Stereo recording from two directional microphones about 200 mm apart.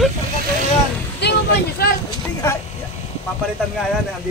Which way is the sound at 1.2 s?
55° left (ahead or behind).